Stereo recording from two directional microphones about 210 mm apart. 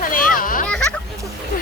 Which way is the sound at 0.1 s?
40° left (ahead or behind).